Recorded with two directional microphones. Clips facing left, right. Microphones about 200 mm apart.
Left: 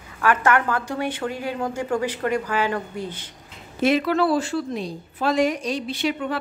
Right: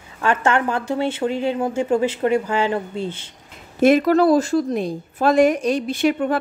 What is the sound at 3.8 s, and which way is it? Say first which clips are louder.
A woman's voice: right 6 dB; 45° right (ahead or behind).